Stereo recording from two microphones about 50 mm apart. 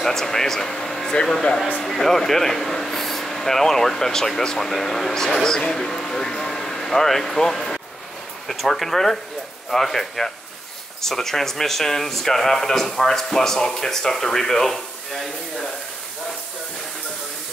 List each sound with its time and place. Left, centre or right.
0.0 s speech: centre